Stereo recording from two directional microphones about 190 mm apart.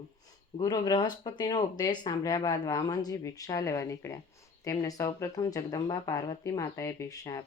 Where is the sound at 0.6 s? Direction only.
20° left (ahead or behind).